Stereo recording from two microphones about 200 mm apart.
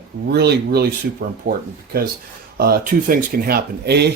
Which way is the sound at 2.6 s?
50° right (ahead or behind).